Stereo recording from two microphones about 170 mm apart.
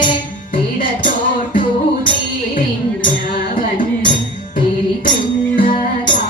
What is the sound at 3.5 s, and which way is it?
Music, 50° left (ahead or behind).